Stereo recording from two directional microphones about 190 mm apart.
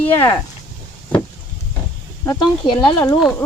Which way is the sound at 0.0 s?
15° left (ahead or behind).